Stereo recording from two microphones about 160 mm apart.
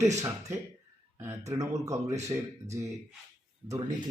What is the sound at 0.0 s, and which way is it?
Speech, 20° right (ahead or behind).